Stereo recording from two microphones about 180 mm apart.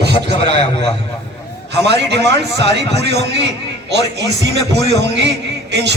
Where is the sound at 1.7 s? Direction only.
70° right (ahead or behind).